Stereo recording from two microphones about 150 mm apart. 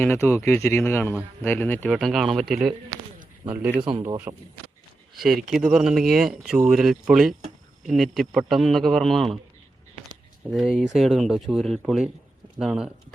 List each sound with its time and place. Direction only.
0.0 s speech: 15° left (ahead or behind)
1.9 s speech: centre (ahead or behind)
3.5 s speech: 15° right (ahead or behind)
3.8 s a man's voice: 35° right (ahead or behind)
4.3 s speech: 25° right (ahead or behind)
5.1 s speech: centre (ahead or behind)
10.5 s speech: 5° right (ahead or behind)